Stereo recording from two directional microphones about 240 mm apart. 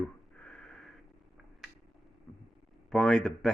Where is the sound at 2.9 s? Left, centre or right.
Centre.